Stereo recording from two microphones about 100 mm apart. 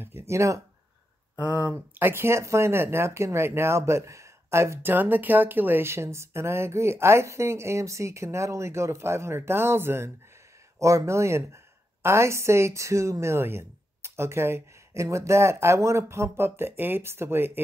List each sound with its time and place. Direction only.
0.0 s speech: 25° right (ahead or behind)
1.4 s speech: 15° right (ahead or behind)